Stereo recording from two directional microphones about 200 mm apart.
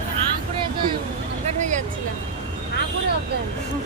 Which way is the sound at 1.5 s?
35° right (ahead or behind).